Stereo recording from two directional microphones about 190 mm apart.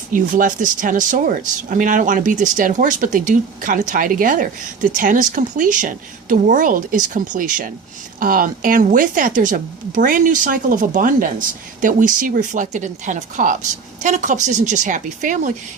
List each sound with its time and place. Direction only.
0.1 s speech: 45° right (ahead or behind)